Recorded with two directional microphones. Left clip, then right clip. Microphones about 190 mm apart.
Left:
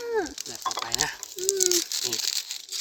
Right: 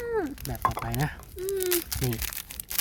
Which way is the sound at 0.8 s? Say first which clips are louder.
Left 4 dB; 25° right (ahead or behind).